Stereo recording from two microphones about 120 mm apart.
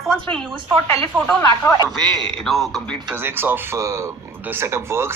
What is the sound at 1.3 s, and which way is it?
Speech, 20° left (ahead or behind).